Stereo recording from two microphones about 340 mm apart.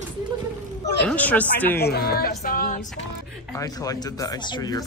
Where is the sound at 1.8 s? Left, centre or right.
Left.